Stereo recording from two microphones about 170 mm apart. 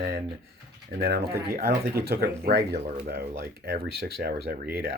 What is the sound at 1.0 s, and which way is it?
Speech, 65° right (ahead or behind).